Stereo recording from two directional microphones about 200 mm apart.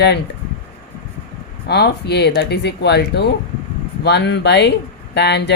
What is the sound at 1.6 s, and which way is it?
A woman's voice, 55° left (ahead or behind).